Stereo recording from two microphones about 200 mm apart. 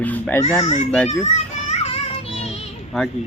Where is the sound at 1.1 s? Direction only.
35° left (ahead or behind).